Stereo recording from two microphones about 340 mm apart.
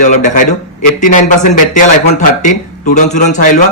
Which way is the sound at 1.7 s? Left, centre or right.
Left.